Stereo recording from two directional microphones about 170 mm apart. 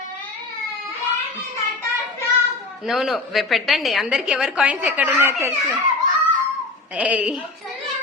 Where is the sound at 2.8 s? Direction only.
Centre (ahead or behind).